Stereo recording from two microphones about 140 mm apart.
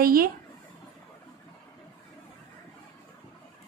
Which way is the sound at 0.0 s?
90° right.